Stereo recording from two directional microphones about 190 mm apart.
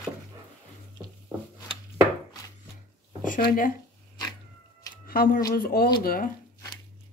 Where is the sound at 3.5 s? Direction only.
45° left (ahead or behind).